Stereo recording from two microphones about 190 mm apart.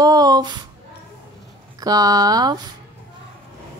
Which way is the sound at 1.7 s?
20° right (ahead or behind).